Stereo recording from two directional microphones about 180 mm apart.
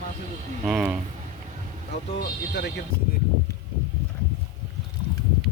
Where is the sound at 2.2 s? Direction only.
70° left (ahead or behind).